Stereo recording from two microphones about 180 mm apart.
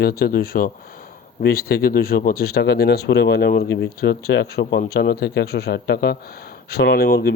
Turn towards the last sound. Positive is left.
turn(degrees=60)  # may be behind; listen again after turning